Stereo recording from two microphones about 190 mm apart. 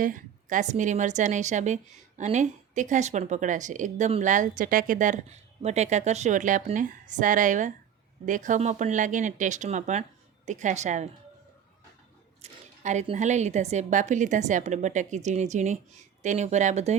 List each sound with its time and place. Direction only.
0.0 s a woman's voice: 45° right (ahead or behind)
12.4 s a woman's voice: 40° right (ahead or behind)